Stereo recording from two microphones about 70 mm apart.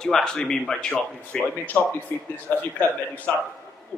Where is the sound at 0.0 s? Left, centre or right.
Centre.